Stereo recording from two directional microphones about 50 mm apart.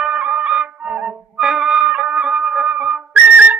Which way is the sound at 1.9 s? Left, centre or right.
Right.